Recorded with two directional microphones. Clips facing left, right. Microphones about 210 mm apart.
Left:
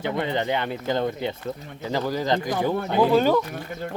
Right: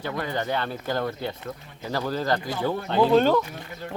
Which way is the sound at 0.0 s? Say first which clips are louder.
Left 4 dB; 20° left (ahead or behind).